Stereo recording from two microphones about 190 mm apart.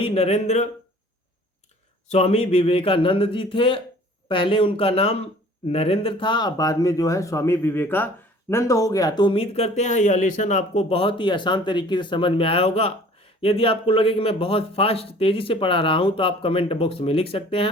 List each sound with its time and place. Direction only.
0.0 s speech: 30° left (ahead or behind)
2.0 s speech: 30° left (ahead or behind)